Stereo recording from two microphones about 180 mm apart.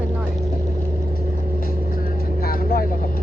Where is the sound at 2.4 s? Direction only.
55° left (ahead or behind).